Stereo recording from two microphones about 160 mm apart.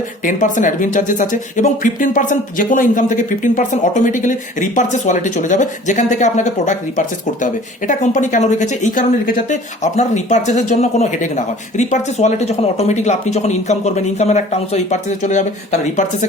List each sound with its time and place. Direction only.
0.3 s speech: 55° left (ahead or behind)